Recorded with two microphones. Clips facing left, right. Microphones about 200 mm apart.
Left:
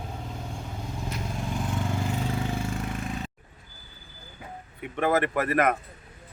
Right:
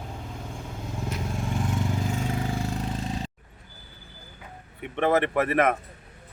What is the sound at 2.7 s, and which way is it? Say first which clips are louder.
Vehicle: right 1 dB; 30° right (ahead or behind).